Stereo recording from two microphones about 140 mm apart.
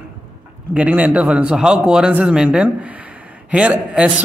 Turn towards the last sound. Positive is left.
turn(degrees=-10)  # may be behind; listen again after turning